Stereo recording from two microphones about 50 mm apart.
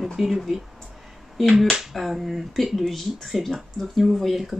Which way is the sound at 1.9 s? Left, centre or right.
Centre.